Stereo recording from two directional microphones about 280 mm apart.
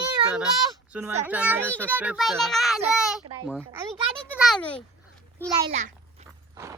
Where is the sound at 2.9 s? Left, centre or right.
Centre.